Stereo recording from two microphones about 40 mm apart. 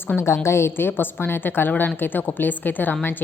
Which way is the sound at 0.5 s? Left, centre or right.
Left.